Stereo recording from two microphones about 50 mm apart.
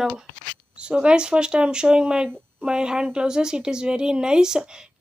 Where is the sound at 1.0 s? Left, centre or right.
Centre.